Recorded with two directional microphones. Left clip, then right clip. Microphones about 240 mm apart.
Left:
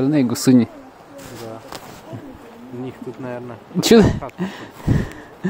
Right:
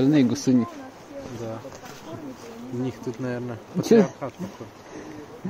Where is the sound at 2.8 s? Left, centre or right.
Right.